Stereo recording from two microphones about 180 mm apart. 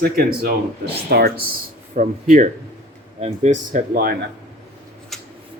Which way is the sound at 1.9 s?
45° right (ahead or behind).